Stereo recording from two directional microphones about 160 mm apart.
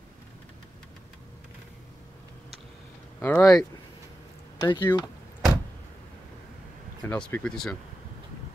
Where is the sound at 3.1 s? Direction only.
10° left (ahead or behind).